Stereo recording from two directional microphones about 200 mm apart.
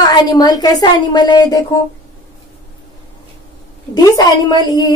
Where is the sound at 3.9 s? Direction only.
20° left (ahead or behind).